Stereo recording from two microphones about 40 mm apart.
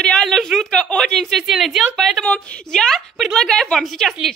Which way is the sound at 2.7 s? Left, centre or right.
Centre.